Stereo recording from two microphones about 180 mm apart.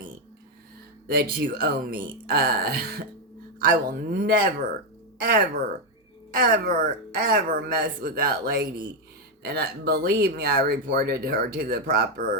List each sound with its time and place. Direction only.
1.0 s speech: 60° right (ahead or behind)